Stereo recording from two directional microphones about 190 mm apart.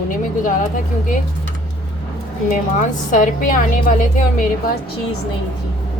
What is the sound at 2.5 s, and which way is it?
A woman's voice, 45° left (ahead or behind).